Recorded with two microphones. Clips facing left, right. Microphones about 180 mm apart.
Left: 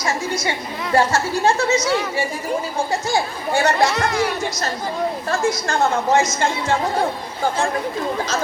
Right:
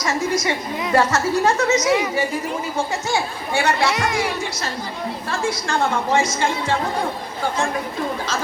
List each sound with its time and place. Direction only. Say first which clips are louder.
0.0 s a sound: right 2 dB; 30° left (ahead or behind)
0.9 s speech: even; 30° left (ahead or behind)
3.1 s speech: left 2 dB; 40° left (ahead or behind)
3.9 s music: left 2 dB; 15° right (ahead or behind)
5.3 s a woman's voice: left 1 dB; 45° left (ahead or behind)